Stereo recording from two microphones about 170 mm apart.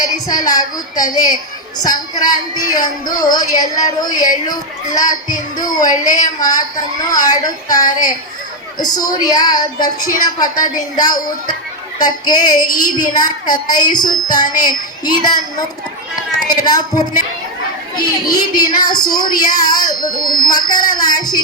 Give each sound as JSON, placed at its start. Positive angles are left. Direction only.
{"t": 0.3, "sound": "speech", "side_deg": 20}
{"t": 16.5, "sound": "speech", "side_deg": 25}